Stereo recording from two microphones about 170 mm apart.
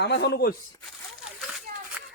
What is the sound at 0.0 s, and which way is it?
Speech, 80° left.